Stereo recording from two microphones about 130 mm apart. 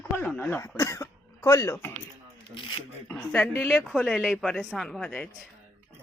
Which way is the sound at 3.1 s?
10° left (ahead or behind).